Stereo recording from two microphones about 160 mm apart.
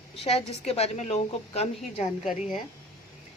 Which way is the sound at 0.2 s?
40° left (ahead or behind).